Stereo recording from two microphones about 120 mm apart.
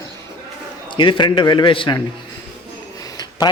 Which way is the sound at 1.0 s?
40° left (ahead or behind).